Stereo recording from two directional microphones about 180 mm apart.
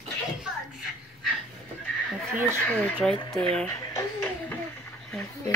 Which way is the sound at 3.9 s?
15° left (ahead or behind).